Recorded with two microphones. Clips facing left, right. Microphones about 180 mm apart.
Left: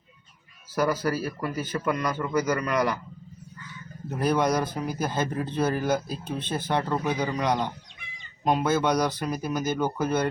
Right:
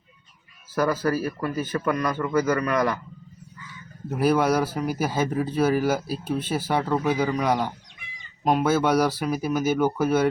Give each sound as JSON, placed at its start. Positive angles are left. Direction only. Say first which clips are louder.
{"t": 0.8, "sound": "a man's voice", "louder": "right 2 dB", "side_deg": 15}
{"t": 4.2, "sound": "speech", "louder": "right 3 dB", "side_deg": -5}